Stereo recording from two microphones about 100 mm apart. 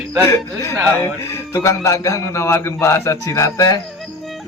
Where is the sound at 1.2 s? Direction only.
25° left (ahead or behind).